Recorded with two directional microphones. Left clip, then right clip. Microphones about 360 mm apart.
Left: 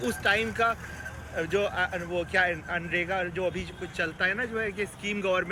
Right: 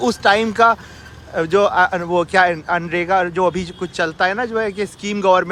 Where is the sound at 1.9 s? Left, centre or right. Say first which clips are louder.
Right 12 dB; right.